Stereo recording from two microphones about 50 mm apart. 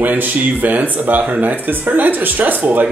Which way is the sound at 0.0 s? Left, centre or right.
Right.